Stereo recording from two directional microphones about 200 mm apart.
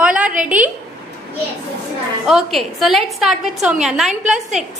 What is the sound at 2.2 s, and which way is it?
A woman's voice, centre (ahead or behind).